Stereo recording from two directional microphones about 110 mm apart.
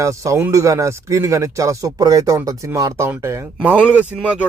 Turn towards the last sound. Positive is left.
turn(degrees=-10)  # may be behind; listen again after turning